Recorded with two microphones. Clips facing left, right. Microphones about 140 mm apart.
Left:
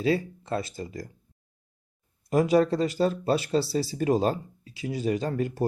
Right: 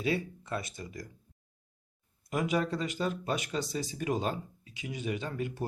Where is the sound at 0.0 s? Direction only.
30° left (ahead or behind).